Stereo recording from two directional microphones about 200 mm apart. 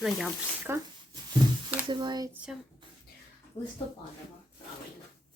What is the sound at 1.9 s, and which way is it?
Speech, 20° right (ahead or behind).